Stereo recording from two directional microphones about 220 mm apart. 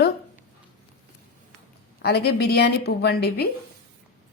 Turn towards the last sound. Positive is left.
turn(degrees=45)  # may be behind; listen again after turning